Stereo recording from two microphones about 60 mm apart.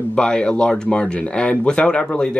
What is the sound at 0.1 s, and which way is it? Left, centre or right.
Speech, centre.